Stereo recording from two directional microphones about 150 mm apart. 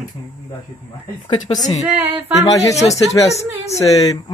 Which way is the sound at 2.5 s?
20° left (ahead or behind).